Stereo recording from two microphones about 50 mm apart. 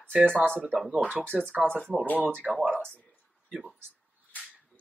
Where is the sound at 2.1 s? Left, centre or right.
Right.